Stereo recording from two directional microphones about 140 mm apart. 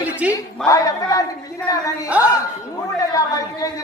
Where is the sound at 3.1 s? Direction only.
25° left (ahead or behind).